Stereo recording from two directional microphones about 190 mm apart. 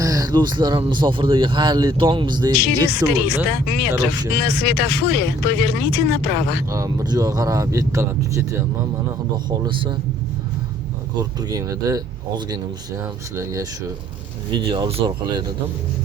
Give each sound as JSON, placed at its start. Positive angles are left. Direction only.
{"t": 0.0, "sound": "speech", "side_deg": -20}
{"t": 2.5, "sound": "speech", "side_deg": 60}
{"t": 4.4, "sound": "speech", "side_deg": 60}
{"t": 6.7, "sound": "speech", "side_deg": -20}
{"t": 9.5, "sound": "speech", "side_deg": -25}
{"t": 11.2, "sound": "speech", "side_deg": -20}